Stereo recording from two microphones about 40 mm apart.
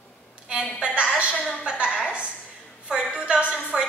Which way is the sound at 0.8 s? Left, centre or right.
Right.